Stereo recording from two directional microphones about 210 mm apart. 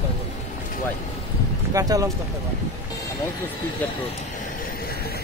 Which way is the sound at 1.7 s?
15° right (ahead or behind).